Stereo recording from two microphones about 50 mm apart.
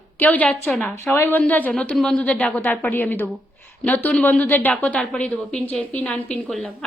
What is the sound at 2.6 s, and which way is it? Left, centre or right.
A woman's voice, left.